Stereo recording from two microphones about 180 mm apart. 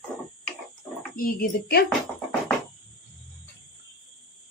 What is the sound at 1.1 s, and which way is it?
Speech, 55° left (ahead or behind).